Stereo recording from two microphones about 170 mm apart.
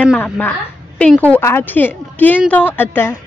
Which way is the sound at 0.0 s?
10° left (ahead or behind).